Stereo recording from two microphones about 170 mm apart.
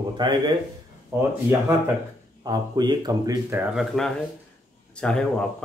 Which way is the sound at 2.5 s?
25° right (ahead or behind).